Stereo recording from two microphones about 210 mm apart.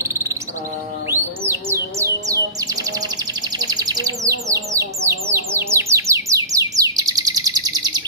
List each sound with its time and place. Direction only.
0.0 s insect: 10° right (ahead or behind)
1.1 s music: 10° right (ahead or behind)
3.5 s bird: 20° right (ahead or behind)